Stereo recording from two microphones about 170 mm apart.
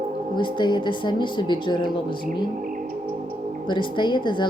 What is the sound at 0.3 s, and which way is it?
Speech, 25° left (ahead or behind).